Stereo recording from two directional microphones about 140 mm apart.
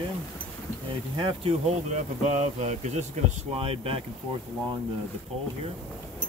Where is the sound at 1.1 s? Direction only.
35° right (ahead or behind).